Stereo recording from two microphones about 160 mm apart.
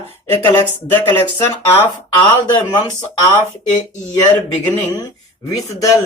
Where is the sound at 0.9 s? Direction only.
10° left (ahead or behind).